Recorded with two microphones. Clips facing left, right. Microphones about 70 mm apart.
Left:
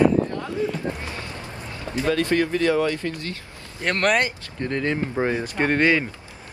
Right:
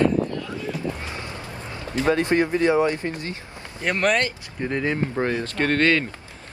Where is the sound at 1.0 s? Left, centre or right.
Right.